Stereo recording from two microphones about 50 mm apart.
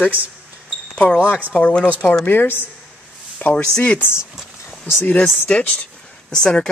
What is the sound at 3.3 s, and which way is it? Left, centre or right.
Speech, left.